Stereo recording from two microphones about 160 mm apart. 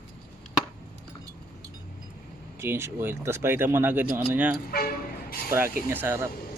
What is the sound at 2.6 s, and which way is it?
Speech, 15° right (ahead or behind).